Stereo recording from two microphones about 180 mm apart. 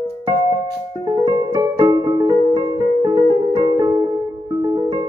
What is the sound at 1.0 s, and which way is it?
Keyboard, 25° right (ahead or behind).